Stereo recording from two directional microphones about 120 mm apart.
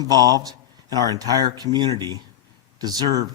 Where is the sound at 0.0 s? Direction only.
35° right (ahead or behind).